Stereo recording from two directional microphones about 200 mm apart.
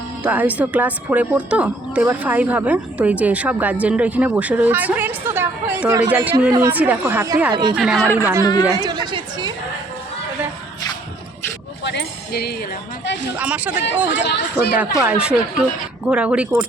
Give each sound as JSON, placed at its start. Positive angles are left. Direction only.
{"t": 0.2, "sound": "a woman's voice", "side_deg": -5}
{"t": 8.1, "sound": "a woman's voice", "side_deg": -10}
{"t": 8.4, "sound": "speech", "side_deg": 20}
{"t": 8.7, "sound": "chatter", "side_deg": -20}
{"t": 11.8, "sound": "music", "side_deg": 60}
{"t": 13.4, "sound": "a woman's voice", "side_deg": -5}
{"t": 14.3, "sound": "speech", "side_deg": 55}
{"t": 15.0, "sound": "speech", "side_deg": -5}